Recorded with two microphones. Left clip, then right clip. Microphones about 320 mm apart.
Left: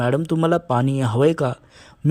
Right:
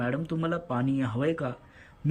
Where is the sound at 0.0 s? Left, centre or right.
Centre.